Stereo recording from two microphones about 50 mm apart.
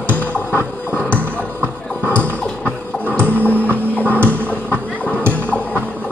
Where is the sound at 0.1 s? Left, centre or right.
Left.